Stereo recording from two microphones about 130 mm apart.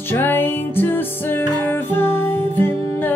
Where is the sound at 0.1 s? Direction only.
15° left (ahead or behind).